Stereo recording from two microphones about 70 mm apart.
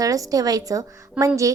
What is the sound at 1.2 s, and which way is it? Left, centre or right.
Speech, centre.